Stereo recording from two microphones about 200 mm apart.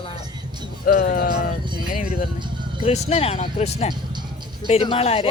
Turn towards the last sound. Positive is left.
turn(degrees=30)  # may be behind; listen again after turning